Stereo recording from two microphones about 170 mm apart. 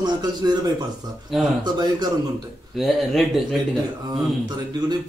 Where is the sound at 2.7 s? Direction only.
Centre (ahead or behind).